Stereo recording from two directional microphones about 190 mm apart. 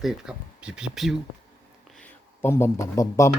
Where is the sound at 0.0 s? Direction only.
5° right (ahead or behind); by 3.3 s 15° left (ahead or behind).